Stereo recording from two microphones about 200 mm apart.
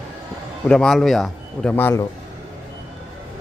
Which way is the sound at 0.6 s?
5° left (ahead or behind).